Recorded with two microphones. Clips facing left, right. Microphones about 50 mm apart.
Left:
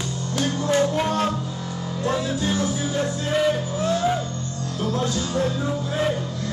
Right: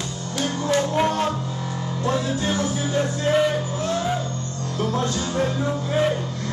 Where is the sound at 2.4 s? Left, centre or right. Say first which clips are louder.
Even; right.